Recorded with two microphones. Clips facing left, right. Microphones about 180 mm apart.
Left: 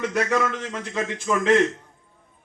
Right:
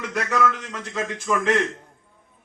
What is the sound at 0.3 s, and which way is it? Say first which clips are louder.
Speech: right 1 dB; 25° left (ahead or behind).